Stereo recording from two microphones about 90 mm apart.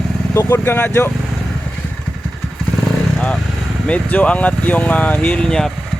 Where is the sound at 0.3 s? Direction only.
30° left (ahead or behind).